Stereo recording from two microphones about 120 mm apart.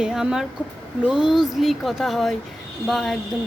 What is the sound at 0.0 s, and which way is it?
A woman's voice, 5° right (ahead or behind).